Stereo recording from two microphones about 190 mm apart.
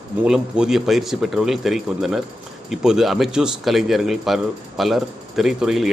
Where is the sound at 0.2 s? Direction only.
5° right (ahead or behind).